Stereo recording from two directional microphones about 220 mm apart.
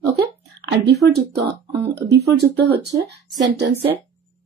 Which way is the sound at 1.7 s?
15° right (ahead or behind).